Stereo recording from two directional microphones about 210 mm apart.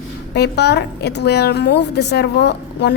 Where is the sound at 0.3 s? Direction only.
50° left (ahead or behind).